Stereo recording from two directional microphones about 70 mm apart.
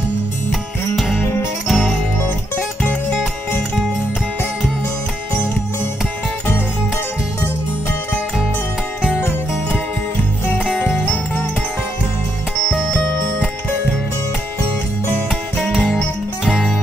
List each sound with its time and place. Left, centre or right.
0.5 s music: centre
12.6 s music: centre
16.4 s music: centre